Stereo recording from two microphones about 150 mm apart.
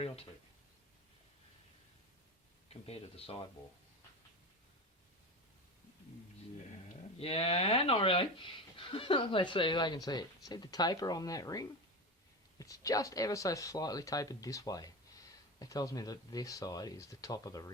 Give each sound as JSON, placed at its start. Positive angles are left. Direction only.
{"t": 2.6, "sound": "speech", "side_deg": 45}
{"t": 7.2, "sound": "speech", "side_deg": 40}